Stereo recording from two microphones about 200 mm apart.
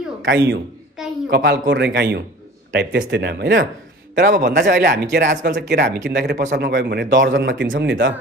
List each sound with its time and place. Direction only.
0.3 s speech: 65° right (ahead or behind)
1.0 s a sound: centre (ahead or behind)
1.3 s speech: 50° right (ahead or behind)
4.3 s speech: 45° right (ahead or behind); by 8.1 s 70° right (ahead or behind)